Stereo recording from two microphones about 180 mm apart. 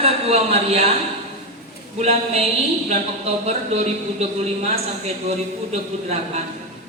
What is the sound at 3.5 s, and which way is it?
A woman's voice, 40° right (ahead or behind).